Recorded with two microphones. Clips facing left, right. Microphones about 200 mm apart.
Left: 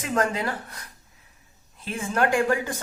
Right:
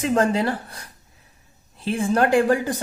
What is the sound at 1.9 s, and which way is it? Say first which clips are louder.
Speech: right 5 dB; 35° right (ahead or behind).